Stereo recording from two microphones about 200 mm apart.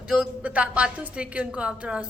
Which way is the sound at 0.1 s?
5° right (ahead or behind).